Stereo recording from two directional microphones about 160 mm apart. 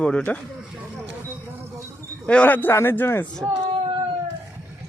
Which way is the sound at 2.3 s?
10° left (ahead or behind).